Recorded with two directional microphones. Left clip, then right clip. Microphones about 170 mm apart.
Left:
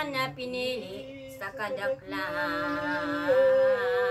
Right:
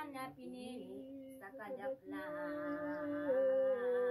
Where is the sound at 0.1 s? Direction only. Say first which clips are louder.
Left 17 dB; 30° right (ahead or behind).